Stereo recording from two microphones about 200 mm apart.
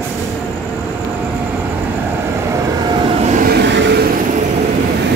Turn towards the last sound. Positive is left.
turn(degrees=-65)  # may be behind; listen again after turning